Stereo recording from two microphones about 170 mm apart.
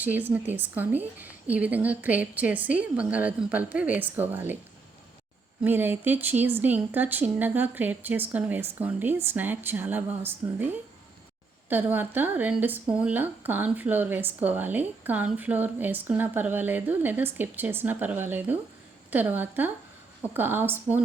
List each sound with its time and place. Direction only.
0.0 s speech: 10° right (ahead or behind)
5.6 s speech: 10° right (ahead or behind)
11.7 s speech: 10° right (ahead or behind)